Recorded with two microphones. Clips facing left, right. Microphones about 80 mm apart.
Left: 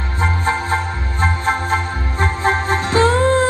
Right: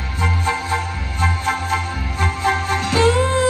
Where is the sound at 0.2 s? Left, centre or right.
Left.